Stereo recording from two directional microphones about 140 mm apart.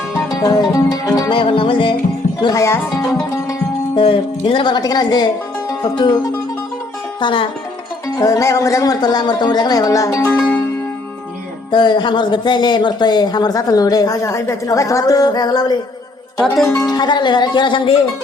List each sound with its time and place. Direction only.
0.3 s music: 25° left (ahead or behind)
1.3 s speech: 40° left (ahead or behind)
2.4 s speech: 25° left (ahead or behind)
3.9 s speech: 40° left (ahead or behind)
7.2 s speech: 35° left (ahead or behind)
8.0 s speech: 25° left (ahead or behind)
11.7 s speech: 30° left (ahead or behind)
16.8 s speech: 30° left (ahead or behind)